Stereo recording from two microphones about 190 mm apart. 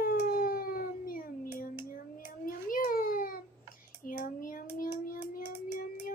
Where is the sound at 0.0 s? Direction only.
50° left (ahead or behind).